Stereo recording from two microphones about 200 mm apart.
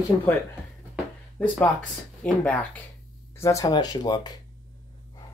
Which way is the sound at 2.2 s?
5° left (ahead or behind).